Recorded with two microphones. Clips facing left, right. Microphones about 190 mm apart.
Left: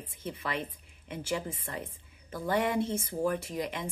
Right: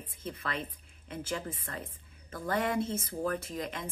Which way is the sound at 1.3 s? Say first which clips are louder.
Left 4 dB; 15° left (ahead or behind).